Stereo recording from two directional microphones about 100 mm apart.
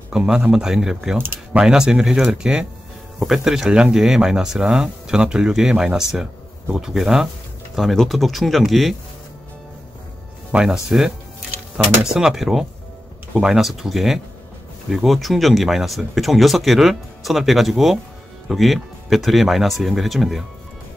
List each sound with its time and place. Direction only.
0.1 s speech: 5° right (ahead or behind)
1.1 s speech: 20° right (ahead or behind)
1.6 s speech: 5° right (ahead or behind)
10.5 s speech: 10° right (ahead or behind)